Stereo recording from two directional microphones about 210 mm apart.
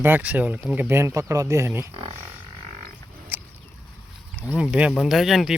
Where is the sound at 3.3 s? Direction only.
10° right (ahead or behind).